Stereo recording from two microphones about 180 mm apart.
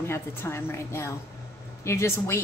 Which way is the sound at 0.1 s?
15° left (ahead or behind).